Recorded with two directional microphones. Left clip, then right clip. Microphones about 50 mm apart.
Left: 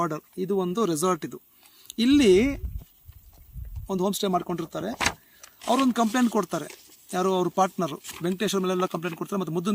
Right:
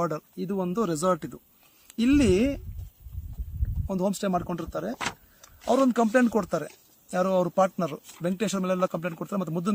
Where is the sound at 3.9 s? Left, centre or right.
Right.